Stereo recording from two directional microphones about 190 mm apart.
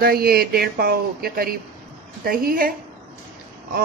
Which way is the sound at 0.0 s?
55° right (ahead or behind).